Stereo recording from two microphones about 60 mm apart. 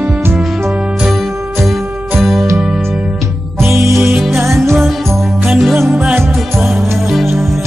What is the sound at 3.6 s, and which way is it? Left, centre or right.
Music, right.